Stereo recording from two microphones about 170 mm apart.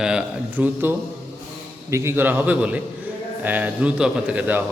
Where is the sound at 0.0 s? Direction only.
5° right (ahead or behind).